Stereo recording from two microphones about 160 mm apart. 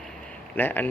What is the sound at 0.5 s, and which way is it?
Speech, 10° left (ahead or behind).